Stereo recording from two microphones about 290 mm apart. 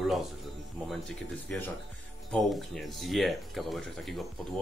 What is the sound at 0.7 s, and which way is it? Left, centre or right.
Speech, centre.